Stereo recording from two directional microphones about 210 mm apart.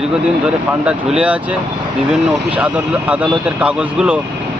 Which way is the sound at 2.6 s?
5° right (ahead or behind).